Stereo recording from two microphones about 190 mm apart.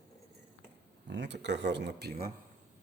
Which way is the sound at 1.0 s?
65° right (ahead or behind).